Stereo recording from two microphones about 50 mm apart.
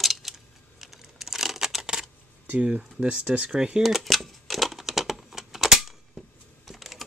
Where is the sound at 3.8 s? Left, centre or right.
Centre.